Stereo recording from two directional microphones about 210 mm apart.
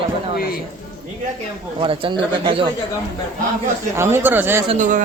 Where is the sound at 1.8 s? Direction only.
25° right (ahead or behind).